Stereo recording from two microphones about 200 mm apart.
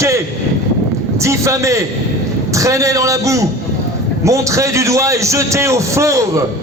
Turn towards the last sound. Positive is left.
turn(degrees=-15)  # may be behind; listen again after turning